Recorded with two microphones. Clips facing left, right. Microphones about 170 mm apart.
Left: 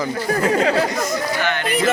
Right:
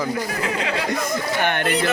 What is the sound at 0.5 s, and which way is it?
Speech, 40° left (ahead or behind).